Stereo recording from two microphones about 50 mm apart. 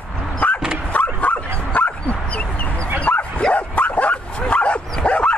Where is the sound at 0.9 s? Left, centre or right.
Left.